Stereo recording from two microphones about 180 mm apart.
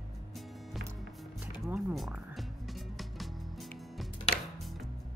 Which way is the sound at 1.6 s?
Centre (ahead or behind).